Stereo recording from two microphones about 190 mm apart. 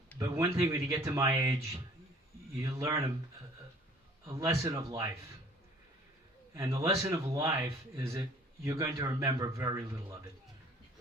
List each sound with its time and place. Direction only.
0.2 s speech: 15° right (ahead or behind)
2.6 s speech: 15° right (ahead or behind)
4.3 s speech: 15° right (ahead or behind)
6.5 s a man's voice: 15° right (ahead or behind)